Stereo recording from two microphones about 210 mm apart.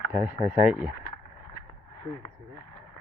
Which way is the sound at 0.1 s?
10° right (ahead or behind).